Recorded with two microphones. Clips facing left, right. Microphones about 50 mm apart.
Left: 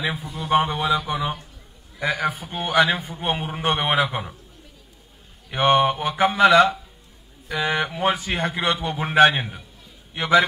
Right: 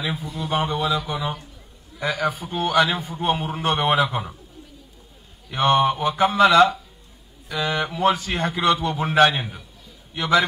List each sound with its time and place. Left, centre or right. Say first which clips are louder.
0.0 s a man's voice: even; centre
5.7 s mantra: even; centre
7.9 s a man's voice: right 2 dB; centre